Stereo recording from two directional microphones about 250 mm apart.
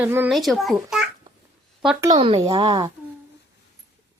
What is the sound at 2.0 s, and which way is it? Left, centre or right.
Speech, centre.